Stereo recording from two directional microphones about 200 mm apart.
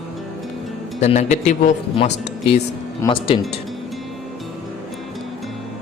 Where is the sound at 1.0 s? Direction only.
35° left (ahead or behind).